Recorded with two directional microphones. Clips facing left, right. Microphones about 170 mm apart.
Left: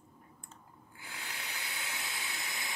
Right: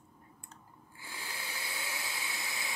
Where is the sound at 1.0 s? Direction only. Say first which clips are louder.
Right 1 dB; 30° right (ahead or behind).